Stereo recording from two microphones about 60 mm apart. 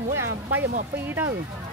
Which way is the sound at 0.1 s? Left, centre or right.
Right.